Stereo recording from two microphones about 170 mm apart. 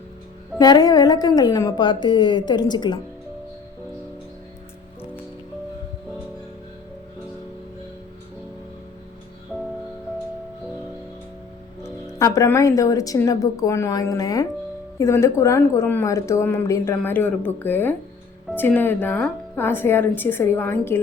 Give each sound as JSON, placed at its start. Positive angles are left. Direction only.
{"t": 0.6, "sound": "speech", "side_deg": 25}
{"t": 11.8, "sound": "speech", "side_deg": 20}